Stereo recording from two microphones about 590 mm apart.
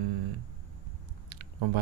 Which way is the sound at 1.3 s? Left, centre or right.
Right.